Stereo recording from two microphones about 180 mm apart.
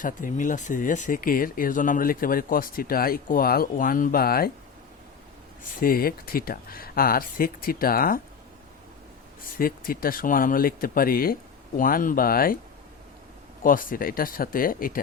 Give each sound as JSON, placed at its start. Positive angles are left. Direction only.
{"t": 0.0, "sound": "speech", "side_deg": 45}
{"t": 5.8, "sound": "speech", "side_deg": 55}
{"t": 9.6, "sound": "speech", "side_deg": 55}
{"t": 13.6, "sound": "speech", "side_deg": 50}